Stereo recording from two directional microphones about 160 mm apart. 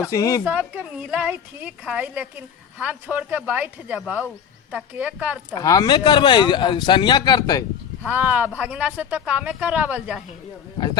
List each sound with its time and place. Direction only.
0.1 s speech: 20° left (ahead or behind)
0.4 s a woman's voice: 10° right (ahead or behind)
5.5 s speech: 25° left (ahead or behind)
8.0 s a woman's voice: 10° right (ahead or behind)